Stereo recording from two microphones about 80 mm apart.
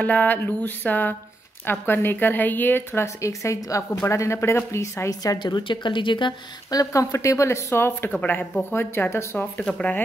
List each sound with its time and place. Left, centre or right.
0.0 s a woman's voice: centre; by 5.1 s left
5.4 s a woman's voice: left
6.7 s speech: left
8.1 s a woman's voice: centre
8.6 s a woman's voice: left